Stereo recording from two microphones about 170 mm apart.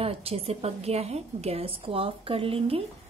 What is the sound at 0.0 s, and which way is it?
A woman's voice, 35° right (ahead or behind).